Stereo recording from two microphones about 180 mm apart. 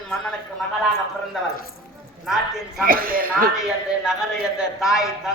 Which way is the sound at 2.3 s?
Centre (ahead or behind).